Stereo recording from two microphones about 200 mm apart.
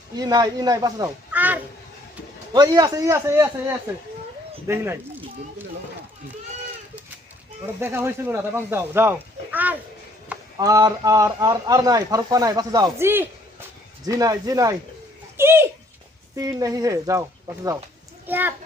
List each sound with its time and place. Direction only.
0.2 s speech: 20° right (ahead or behind)
2.5 s a man's voice: 20° right (ahead or behind)
7.8 s a man's voice: 10° right (ahead or behind)